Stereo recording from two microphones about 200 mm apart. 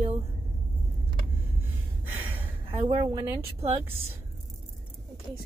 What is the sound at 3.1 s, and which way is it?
Speech, 15° right (ahead or behind).